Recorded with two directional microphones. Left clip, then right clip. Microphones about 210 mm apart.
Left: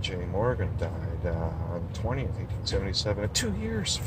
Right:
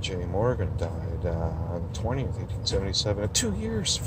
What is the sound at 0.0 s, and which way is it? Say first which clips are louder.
Speech: right 2 dB; 15° right (ahead or behind).